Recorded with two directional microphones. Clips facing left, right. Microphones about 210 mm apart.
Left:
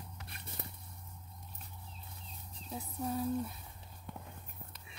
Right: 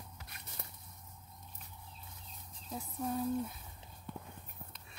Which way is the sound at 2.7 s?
Centre (ahead or behind).